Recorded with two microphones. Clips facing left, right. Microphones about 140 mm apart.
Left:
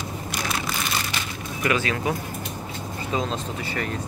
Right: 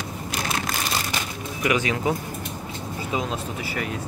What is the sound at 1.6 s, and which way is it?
Speech, 15° right (ahead or behind).